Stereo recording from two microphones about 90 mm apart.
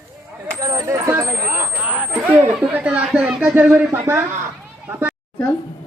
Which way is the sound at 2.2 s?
20° right (ahead or behind).